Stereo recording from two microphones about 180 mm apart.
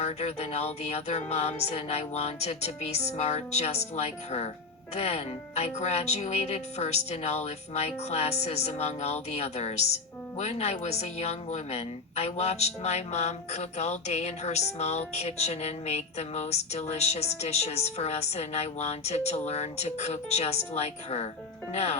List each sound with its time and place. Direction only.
0.0 s speech: 35° left (ahead or behind)